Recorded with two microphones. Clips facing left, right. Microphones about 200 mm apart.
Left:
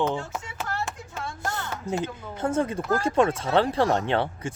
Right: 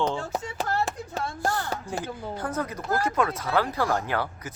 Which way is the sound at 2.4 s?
25° left (ahead or behind).